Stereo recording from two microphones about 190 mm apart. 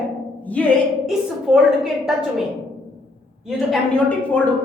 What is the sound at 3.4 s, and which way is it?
Speech, centre (ahead or behind).